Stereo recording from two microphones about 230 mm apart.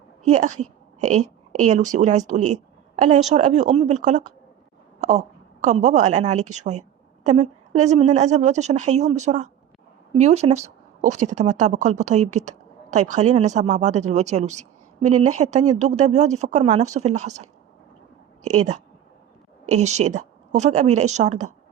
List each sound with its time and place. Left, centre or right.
0.3 s a woman's voice: right
4.9 s a sound: right
5.6 s a woman's voice: right
18.5 s a woman's voice: right